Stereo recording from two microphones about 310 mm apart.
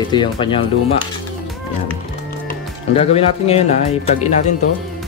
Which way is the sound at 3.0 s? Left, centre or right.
Centre.